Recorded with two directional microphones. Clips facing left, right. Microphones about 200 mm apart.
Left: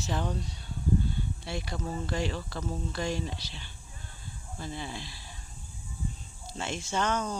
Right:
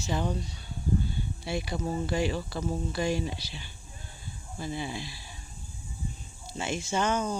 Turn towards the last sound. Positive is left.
turn(degrees=-5)  # may be behind; listen again after turning